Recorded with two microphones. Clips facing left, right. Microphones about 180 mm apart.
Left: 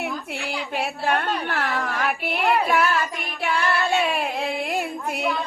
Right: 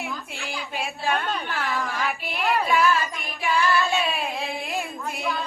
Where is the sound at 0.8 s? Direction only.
65° left (ahead or behind).